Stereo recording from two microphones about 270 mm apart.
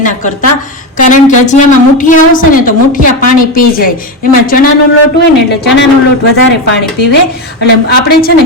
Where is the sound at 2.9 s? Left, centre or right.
Left.